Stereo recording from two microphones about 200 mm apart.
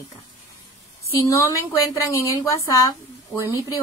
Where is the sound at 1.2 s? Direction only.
15° left (ahead or behind).